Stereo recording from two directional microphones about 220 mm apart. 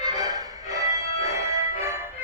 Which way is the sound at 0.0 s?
20° right (ahead or behind).